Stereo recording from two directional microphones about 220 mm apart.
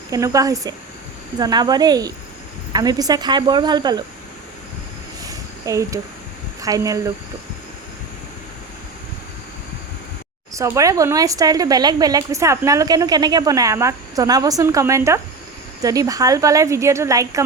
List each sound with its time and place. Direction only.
0.1 s a woman's voice: 15° right (ahead or behind)
5.2 s a sound: 15° right (ahead or behind)
6.6 s speech: 15° right (ahead or behind)
10.5 s speech: 15° right (ahead or behind)